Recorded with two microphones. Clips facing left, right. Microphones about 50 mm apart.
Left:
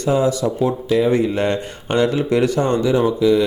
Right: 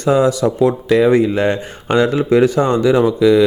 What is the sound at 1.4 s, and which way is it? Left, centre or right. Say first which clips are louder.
Speech: right 3 dB; right.